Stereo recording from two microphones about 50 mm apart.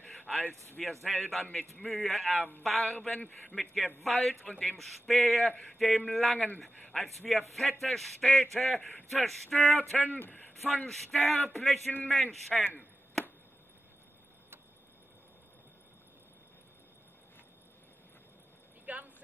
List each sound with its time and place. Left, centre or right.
1.0 s speech: centre
3.2 s a man's voice: left
3.5 s speech: centre
6.3 s a man's voice: left
6.8 s a man's voice: centre
7.2 s speech: centre
9.9 s speech: left
10.6 s speech: centre
11.1 s speech: centre
18.9 s a sound: right